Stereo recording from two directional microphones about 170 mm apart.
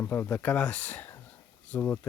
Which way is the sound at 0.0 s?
10° left (ahead or behind).